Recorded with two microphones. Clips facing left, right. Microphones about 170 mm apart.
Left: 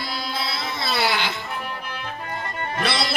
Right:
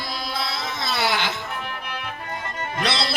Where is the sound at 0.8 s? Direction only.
15° left (ahead or behind).